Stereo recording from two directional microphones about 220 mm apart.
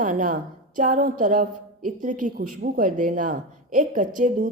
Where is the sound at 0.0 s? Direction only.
40° right (ahead or behind).